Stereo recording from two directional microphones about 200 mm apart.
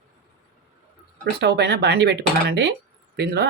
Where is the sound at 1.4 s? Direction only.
55° right (ahead or behind).